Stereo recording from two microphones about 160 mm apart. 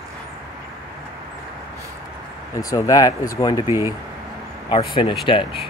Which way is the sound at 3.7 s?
15° right (ahead or behind).